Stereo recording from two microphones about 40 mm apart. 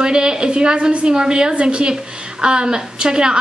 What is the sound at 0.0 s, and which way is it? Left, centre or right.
A woman's voice, right.